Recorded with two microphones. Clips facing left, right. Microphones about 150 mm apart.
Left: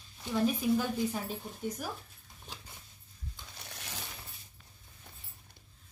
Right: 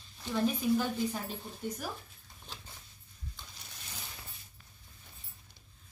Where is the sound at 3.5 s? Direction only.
70° left (ahead or behind).